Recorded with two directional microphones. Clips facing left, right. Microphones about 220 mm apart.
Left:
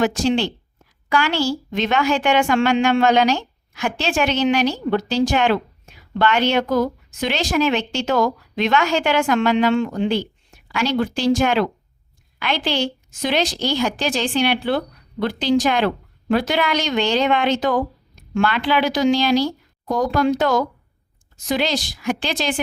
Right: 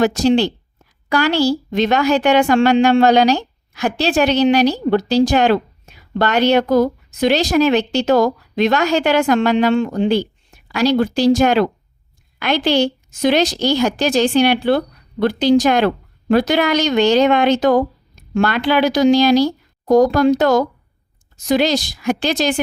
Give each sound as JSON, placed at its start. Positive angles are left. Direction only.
{"t": 0.0, "sound": "a woman's voice", "side_deg": -40}